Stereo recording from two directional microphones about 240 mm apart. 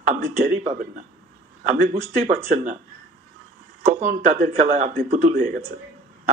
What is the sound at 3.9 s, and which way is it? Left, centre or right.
Speech, right.